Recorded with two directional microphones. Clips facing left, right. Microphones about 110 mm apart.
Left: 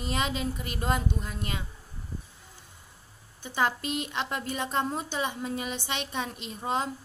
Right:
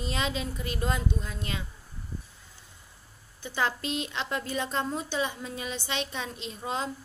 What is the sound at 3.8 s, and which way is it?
Speech, 25° right (ahead or behind).